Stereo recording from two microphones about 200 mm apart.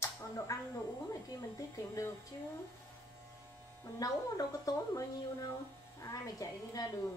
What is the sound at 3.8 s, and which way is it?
A woman's voice, 20° left (ahead or behind).